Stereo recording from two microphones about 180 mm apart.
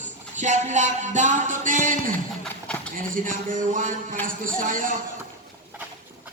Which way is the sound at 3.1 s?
45° right (ahead or behind).